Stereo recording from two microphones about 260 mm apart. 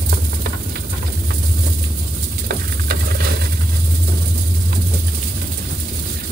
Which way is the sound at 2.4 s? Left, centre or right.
Right.